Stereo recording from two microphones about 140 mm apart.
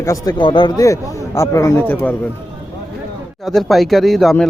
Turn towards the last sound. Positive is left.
turn(degrees=0)  # may be behind; listen again after turning